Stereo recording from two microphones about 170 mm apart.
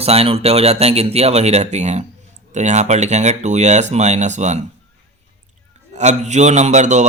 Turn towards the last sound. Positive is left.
turn(degrees=-45)  # may be behind; listen again after turning